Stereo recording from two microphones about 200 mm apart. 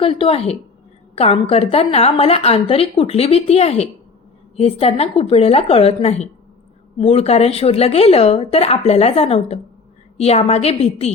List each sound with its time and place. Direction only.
0.0 s a woman's voice: 30° left (ahead or behind)